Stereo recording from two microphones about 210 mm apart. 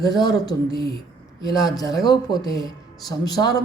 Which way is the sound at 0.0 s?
20° left (ahead or behind).